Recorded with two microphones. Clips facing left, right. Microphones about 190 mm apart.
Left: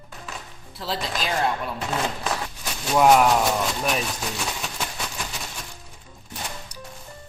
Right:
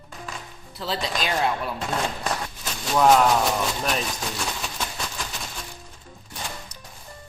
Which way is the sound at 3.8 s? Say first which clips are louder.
Left 1 dB; 5° left (ahead or behind).